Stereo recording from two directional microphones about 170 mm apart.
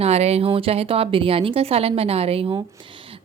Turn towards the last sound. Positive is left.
turn(degrees=-30)  # may be behind; listen again after turning